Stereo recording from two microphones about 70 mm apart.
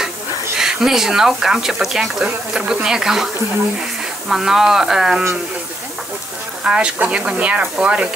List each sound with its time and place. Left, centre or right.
0.6 s speech: centre
4.3 s speech: centre
6.6 s speech: centre